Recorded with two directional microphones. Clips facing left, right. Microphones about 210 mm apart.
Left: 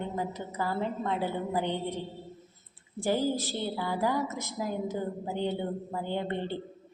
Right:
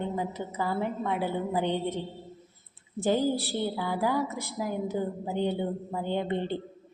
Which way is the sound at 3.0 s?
15° right (ahead or behind).